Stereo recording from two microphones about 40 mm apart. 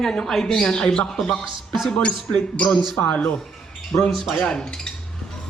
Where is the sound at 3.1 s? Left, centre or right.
Left.